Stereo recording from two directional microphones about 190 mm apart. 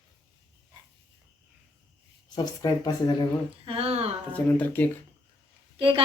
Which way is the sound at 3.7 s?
30° right (ahead or behind).